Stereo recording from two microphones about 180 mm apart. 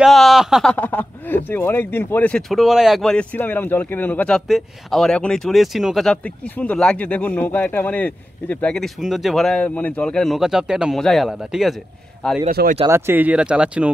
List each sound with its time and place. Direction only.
0.0 s speech: centre (ahead or behind)
12.4 s speech: 55° right (ahead or behind)
12.8 s speech: 15° right (ahead or behind)